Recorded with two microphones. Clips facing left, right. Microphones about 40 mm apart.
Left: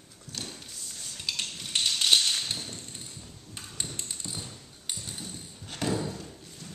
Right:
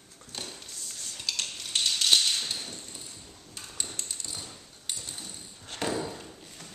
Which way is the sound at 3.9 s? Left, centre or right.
Centre.